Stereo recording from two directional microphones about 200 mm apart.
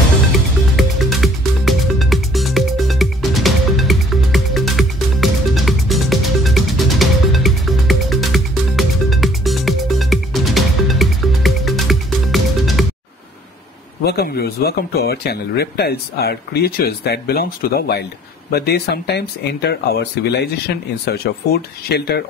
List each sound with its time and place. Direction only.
0.7 s music: centre (ahead or behind)
14.0 s speech: 50° left (ahead or behind)